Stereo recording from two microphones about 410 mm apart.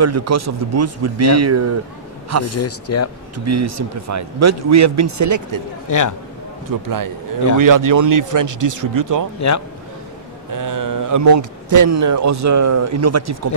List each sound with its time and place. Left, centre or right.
0.0 s a man's voice: right
2.5 s speech: left
3.3 s a man's voice: right
5.9 s a man's voice: left
6.7 s speech: right
9.4 s speech: left
10.5 s speech: right